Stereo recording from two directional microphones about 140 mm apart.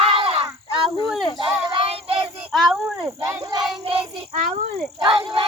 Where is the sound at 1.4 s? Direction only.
40° right (ahead or behind).